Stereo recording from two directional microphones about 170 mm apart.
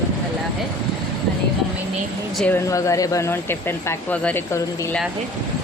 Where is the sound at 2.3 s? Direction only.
10° left (ahead or behind).